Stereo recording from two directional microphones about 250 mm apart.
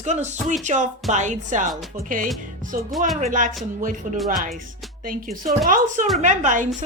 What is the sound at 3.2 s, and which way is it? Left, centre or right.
Speech, right.